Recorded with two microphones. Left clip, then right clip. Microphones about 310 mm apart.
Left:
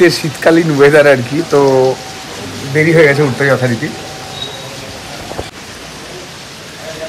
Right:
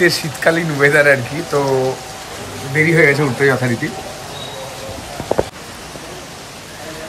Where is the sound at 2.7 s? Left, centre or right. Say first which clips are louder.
Left 4 dB; centre.